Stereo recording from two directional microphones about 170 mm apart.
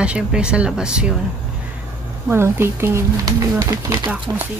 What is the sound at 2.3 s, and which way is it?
Speech, 15° right (ahead or behind).